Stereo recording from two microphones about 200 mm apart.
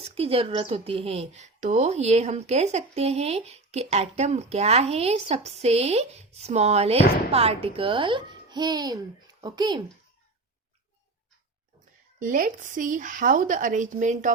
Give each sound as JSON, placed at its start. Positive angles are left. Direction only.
{"t": 0.0, "sound": "a woman's voice", "side_deg": -30}
{"t": 12.2, "sound": "a woman's voice", "side_deg": -40}